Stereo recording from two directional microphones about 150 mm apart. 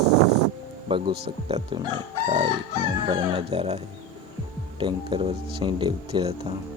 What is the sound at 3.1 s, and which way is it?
Speech, 40° right (ahead or behind).